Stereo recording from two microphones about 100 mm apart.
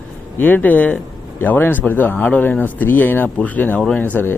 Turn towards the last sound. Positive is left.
turn(degrees=20)  # may be behind; listen again after turning